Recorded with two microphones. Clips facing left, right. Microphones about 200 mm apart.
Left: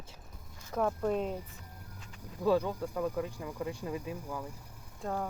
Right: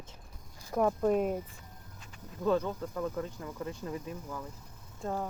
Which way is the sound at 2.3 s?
10° left (ahead or behind).